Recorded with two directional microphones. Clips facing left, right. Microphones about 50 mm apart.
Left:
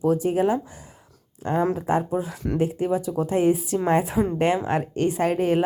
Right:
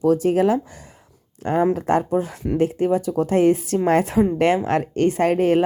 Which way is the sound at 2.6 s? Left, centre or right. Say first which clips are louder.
Right 4 dB; right.